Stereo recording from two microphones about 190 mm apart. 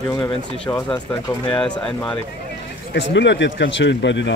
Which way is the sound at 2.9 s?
70° left (ahead or behind).